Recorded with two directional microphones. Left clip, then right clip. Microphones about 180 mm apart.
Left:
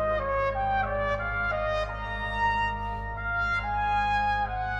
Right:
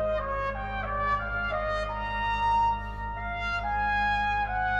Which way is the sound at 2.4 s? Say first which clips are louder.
Right 1 dB; 20° left (ahead or behind).